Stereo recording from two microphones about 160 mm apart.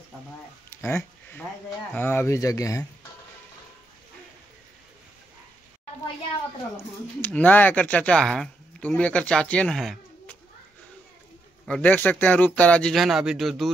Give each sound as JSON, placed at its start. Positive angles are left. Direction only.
{"t": 0.7, "sound": "a sound", "side_deg": 15}
{"t": 2.0, "sound": "speech", "side_deg": 15}
{"t": 7.2, "sound": "speech", "side_deg": 10}
{"t": 11.6, "sound": "speech", "side_deg": 10}